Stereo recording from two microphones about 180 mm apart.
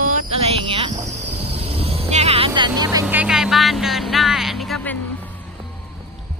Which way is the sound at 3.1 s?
5° right (ahead or behind).